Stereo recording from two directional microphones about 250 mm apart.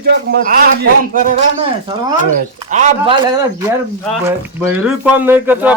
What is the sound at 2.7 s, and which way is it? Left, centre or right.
Speech, right.